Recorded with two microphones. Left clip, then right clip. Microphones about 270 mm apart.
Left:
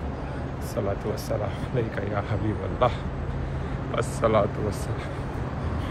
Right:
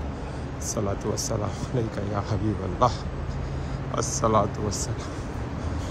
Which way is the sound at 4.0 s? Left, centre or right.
Centre.